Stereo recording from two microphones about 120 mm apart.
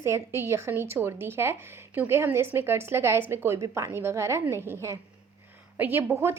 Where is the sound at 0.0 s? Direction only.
25° right (ahead or behind).